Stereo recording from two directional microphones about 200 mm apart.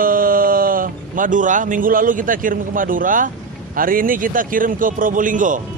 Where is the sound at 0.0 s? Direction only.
45° right (ahead or behind).